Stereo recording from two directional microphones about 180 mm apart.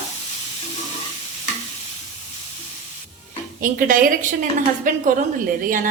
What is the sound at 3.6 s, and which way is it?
Speech, 50° right (ahead or behind).